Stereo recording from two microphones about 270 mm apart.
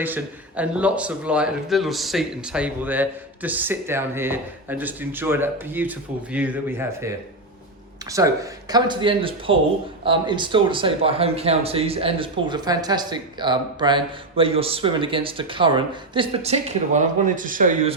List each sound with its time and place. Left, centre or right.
0.0 s speech: centre
8.1 s speech: centre; by 17.9 s right